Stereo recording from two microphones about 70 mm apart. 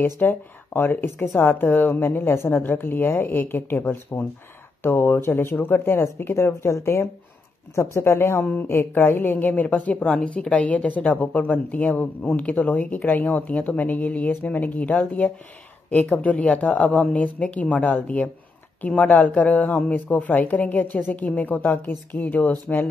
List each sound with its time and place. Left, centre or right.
0.0 s a woman's voice: left